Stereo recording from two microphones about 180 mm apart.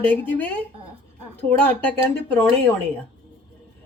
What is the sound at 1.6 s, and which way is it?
Speech, 10° left (ahead or behind).